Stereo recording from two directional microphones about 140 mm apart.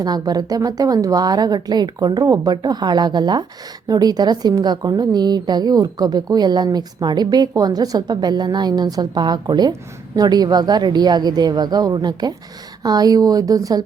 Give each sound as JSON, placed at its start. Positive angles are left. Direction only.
{"t": 0.0, "sound": "a woman's voice", "side_deg": -30}